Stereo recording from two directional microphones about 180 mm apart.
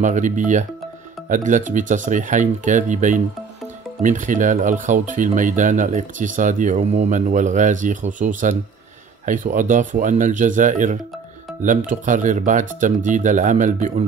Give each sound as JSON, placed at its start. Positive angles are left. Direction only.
{"t": 0.0, "sound": "speech", "side_deg": -45}